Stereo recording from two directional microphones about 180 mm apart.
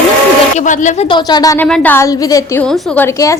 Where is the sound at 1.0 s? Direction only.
25° left (ahead or behind).